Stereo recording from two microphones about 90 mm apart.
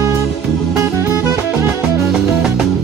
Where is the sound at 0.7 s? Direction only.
30° right (ahead or behind).